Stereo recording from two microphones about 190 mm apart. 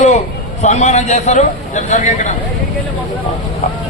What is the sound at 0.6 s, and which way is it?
A man's voice, 35° left (ahead or behind).